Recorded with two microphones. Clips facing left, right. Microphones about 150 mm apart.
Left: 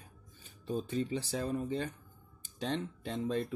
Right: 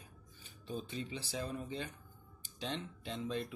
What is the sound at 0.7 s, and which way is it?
Speech, 40° left (ahead or behind).